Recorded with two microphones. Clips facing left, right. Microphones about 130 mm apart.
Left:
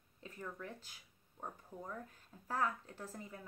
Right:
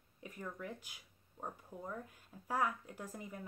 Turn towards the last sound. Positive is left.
turn(degrees=-15)  # may be behind; listen again after turning